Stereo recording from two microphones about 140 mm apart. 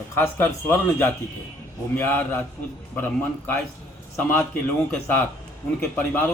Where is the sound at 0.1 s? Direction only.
15° left (ahead or behind).